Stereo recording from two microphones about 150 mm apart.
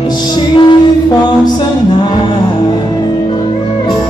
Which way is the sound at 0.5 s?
30° left (ahead or behind).